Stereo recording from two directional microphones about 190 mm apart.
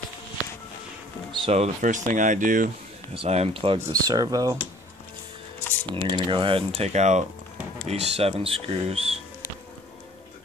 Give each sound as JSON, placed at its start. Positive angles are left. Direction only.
{"t": 1.3, "sound": "speech", "side_deg": -30}
{"t": 3.2, "sound": "speech", "side_deg": -35}
{"t": 5.9, "sound": "speech", "side_deg": -25}